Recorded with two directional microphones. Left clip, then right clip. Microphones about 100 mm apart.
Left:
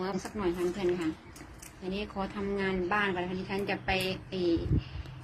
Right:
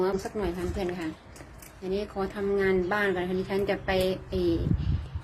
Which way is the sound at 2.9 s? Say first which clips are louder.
Right 3 dB; 35° right (ahead or behind).